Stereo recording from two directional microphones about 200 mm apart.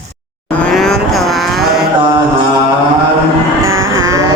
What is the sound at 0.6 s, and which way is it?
Vehicle, centre (ahead or behind).